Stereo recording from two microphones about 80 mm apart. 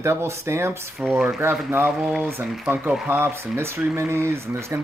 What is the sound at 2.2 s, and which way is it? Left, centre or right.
Speech, right.